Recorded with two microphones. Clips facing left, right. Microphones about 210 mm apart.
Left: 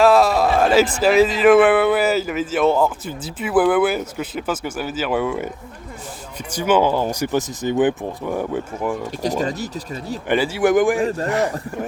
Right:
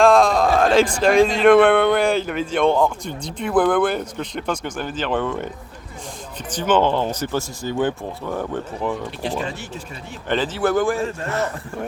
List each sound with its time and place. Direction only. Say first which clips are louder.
0.0 s speech: even; 5° left (ahead or behind)
6.5 s speech: left 1 dB; 10° left (ahead or behind)
9.2 s speech: left 6 dB; 40° left (ahead or behind)
10.2 s speech: left 3 dB; 10° left (ahead or behind)